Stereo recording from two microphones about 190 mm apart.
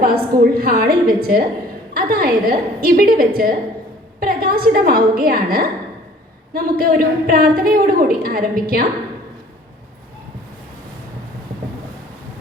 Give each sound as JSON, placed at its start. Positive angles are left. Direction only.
{"t": 0.0, "sound": "a woman's voice", "side_deg": -55}